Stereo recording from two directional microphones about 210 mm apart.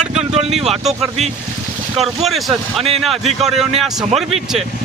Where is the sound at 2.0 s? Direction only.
Centre (ahead or behind).